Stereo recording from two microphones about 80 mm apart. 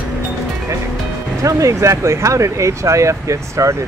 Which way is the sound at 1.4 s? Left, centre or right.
Right.